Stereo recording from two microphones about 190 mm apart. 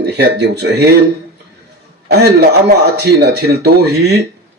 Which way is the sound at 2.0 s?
60° right (ahead or behind).